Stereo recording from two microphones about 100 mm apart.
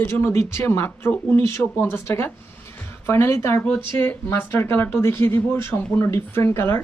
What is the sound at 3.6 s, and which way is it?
Speech, 10° left (ahead or behind).